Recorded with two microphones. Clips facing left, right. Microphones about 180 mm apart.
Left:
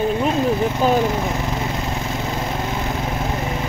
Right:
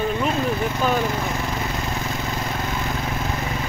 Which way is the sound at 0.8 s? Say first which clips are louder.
Left 4 dB; 35° left (ahead or behind).